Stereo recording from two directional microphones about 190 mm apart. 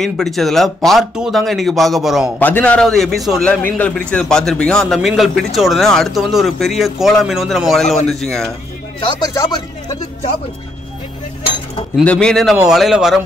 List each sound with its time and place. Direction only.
0.0 s a man's voice: centre (ahead or behind)
2.3 s a man's voice: 10° left (ahead or behind)
9.0 s speech: 20° left (ahead or behind)
12.0 s a man's voice: 5° left (ahead or behind)